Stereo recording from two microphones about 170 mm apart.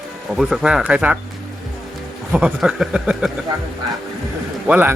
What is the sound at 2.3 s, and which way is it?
Speech, 5° right (ahead or behind).